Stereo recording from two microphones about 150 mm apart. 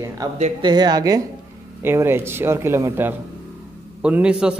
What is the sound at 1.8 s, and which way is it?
Speech, 15° right (ahead or behind).